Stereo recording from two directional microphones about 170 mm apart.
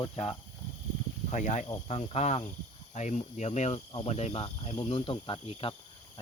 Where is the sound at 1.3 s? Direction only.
45° left (ahead or behind).